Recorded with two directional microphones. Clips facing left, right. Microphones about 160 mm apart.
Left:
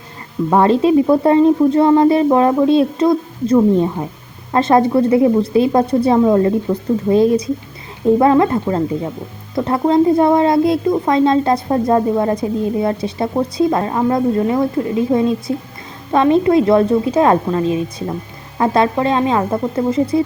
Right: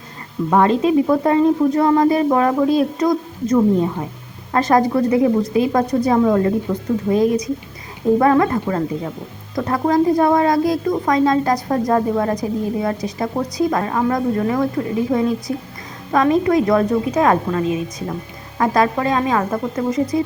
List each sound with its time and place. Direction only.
0.5 s speech: 30° left (ahead or behind)